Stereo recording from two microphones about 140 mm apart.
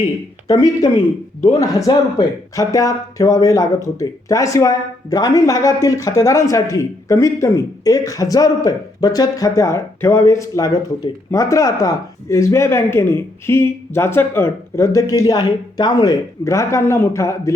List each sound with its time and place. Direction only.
0.4 s speech: 25° left (ahead or behind)
1.4 s speech: 50° left (ahead or behind)
1.6 s speech: 25° left (ahead or behind)